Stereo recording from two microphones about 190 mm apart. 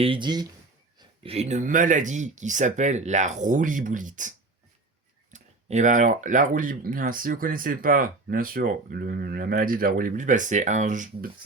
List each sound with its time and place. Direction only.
0.0 s speech: 25° right (ahead or behind); by 11.3 s 40° right (ahead or behind)